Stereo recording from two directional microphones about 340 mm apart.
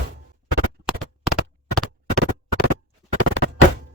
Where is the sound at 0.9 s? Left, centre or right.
Centre.